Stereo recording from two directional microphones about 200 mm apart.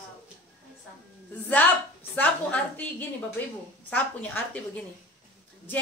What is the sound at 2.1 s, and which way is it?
Speech, 10° left (ahead or behind).